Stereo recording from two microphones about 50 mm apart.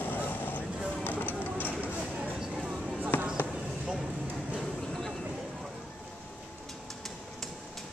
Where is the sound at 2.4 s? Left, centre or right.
Centre.